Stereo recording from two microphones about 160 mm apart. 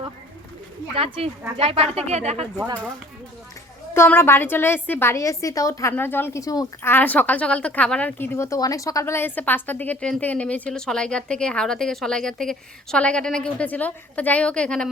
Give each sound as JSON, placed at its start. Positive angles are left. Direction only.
{"t": 0.9, "sound": "speech", "side_deg": -35}
{"t": 3.9, "sound": "a woman's voice", "side_deg": 15}